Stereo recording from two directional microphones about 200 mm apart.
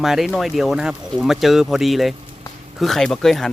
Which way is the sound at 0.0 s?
Centre (ahead or behind).